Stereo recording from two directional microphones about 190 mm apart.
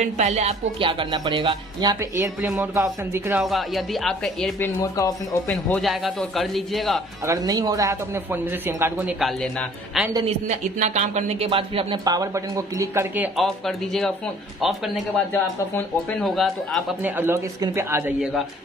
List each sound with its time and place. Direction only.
0.0 s speech: 35° right (ahead or behind); by 3.4 s 10° right (ahead or behind)
3.4 s speech: centre (ahead or behind)
4.7 s speech: 20° left (ahead or behind)
5.5 s speech: centre (ahead or behind)
7.2 s a man's voice: 20° right (ahead or behind)
9.2 s speech: centre (ahead or behind)
10.2 s speech: 40° right (ahead or behind); by 14.1 s centre (ahead or behind)
15.3 s speech: 5° left (ahead or behind)
17.2 s a man's voice: 15° right (ahead or behind)